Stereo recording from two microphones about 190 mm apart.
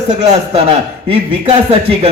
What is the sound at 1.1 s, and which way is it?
A man's voice, 30° right (ahead or behind).